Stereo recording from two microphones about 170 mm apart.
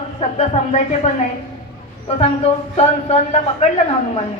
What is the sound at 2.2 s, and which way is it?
A man's voice, 40° left (ahead or behind).